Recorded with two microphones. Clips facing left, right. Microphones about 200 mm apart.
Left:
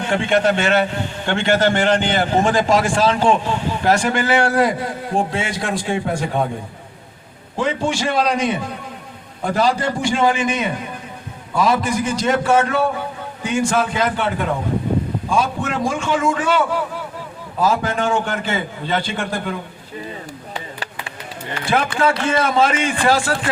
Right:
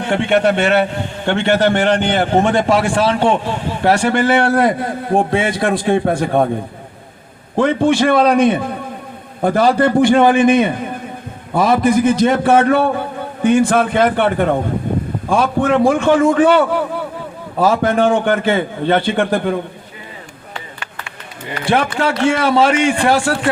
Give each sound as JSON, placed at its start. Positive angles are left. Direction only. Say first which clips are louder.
{"t": 0.1, "sound": "a man's voice", "louder": "right 3 dB", "side_deg": -60}
{"t": 7.5, "sound": "a man's voice", "louder": "right 7 dB", "side_deg": -55}
{"t": 21.8, "sound": "a man's voice", "louder": "even", "side_deg": -70}